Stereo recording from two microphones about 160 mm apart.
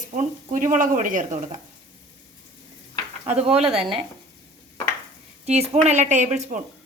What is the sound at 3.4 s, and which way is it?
Speech, 40° right (ahead or behind).